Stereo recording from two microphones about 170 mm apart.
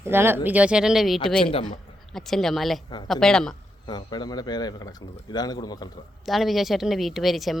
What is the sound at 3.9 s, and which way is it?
Speech, 25° left (ahead or behind).